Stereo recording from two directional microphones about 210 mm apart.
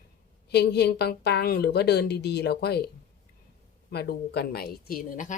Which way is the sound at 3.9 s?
50° left (ahead or behind).